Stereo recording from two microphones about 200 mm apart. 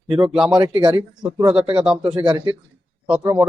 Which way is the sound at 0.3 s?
Centre (ahead or behind).